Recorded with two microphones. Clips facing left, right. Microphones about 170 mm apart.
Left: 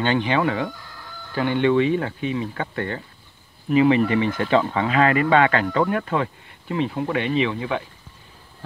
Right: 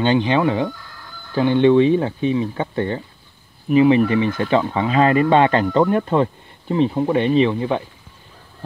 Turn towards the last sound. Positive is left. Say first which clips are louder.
# right 6 dB
turn(degrees=-30)  # may be behind; listen again after turning